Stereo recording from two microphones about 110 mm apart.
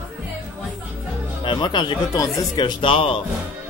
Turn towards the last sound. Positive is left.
turn(degrees=55)  # may be behind; listen again after turning